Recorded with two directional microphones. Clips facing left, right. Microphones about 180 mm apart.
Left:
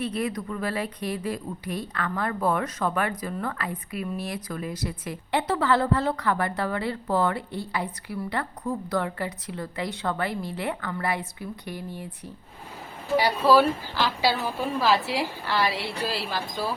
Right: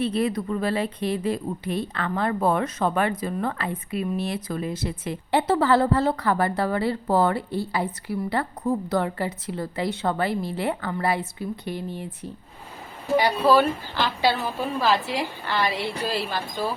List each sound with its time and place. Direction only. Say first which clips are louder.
0.0 s a woman's voice: right 5 dB; 30° right (ahead or behind)
13.5 s a woman's voice: left 1 dB; 5° left (ahead or behind)